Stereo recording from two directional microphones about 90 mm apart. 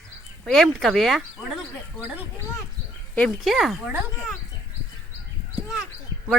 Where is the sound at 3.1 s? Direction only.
5° left (ahead or behind).